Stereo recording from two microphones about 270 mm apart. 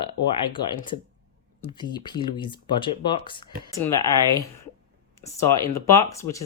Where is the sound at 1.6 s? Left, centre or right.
Centre.